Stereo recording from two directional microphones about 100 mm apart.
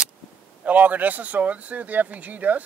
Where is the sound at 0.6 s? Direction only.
15° right (ahead or behind).